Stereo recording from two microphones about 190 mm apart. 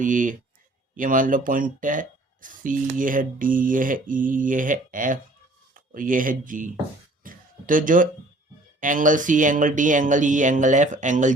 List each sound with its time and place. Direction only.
0.0 s speech: 45° right (ahead or behind)
7.3 s a sound: 45° right (ahead or behind)
8.8 s speech: 45° right (ahead or behind)